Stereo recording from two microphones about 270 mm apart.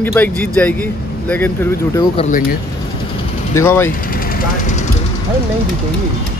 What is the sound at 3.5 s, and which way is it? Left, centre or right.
Speech, centre.